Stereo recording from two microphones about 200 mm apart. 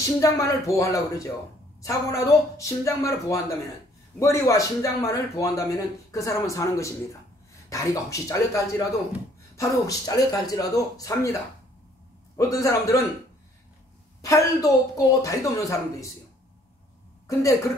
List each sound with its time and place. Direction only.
0.2 s speech: 15° left (ahead or behind)
12.4 s speech: 15° left (ahead or behind)
14.2 s speech: 15° left (ahead or behind)
17.3 s a woman's voice: 15° left (ahead or behind)